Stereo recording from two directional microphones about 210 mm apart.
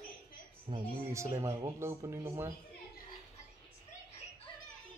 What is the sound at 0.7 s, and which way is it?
Speech, 25° right (ahead or behind).